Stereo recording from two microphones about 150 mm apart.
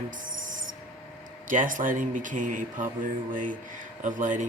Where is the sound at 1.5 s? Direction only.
60° right (ahead or behind).